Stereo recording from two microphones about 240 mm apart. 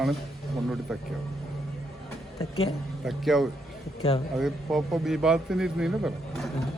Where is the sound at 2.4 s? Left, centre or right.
Left.